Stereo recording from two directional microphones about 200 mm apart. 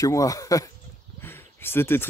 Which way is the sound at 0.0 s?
15° left (ahead or behind).